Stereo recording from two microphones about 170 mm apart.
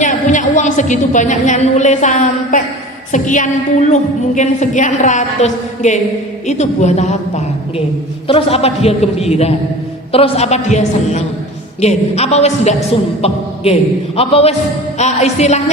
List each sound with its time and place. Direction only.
0.0 s a woman's voice: 45° left (ahead or behind)